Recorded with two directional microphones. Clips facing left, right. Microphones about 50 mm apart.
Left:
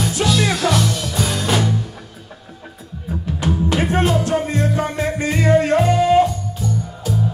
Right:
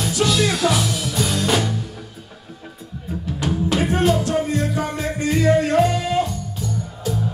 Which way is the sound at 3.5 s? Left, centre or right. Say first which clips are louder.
Left 1 dB; centre.